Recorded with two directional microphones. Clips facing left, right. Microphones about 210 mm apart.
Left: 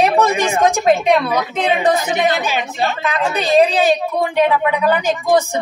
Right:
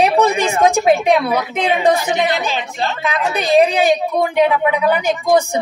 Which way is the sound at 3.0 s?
10° right (ahead or behind).